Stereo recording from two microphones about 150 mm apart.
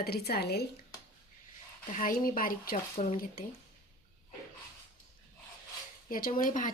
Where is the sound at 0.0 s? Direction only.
90° left.